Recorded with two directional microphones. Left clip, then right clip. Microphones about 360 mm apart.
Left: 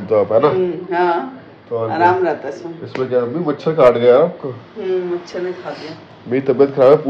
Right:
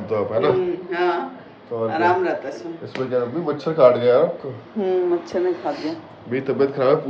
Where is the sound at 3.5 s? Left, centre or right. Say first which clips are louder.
Left 2 dB; centre.